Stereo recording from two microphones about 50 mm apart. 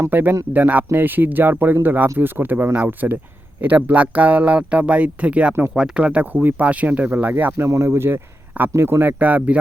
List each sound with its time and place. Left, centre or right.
0.1 s speech: right
5.7 s speech: centre
6.0 s speech: right
7.6 s speech: right
9.1 s speech: right